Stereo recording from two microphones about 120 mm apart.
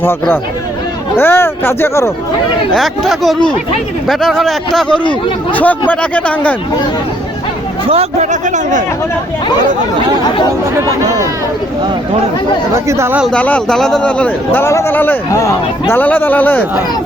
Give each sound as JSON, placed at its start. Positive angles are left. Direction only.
{"t": 0.0, "sound": "a man's voice", "side_deg": 15}
{"t": 2.7, "sound": "a man's voice", "side_deg": 0}
{"t": 5.5, "sound": "a man's voice", "side_deg": 15}
{"t": 7.9, "sound": "speech", "side_deg": -65}
{"t": 12.7, "sound": "speech", "side_deg": -25}
{"t": 13.3, "sound": "a man's voice", "side_deg": 10}
{"t": 15.3, "sound": "speech", "side_deg": 30}
{"t": 16.0, "sound": "a man's voice", "side_deg": 15}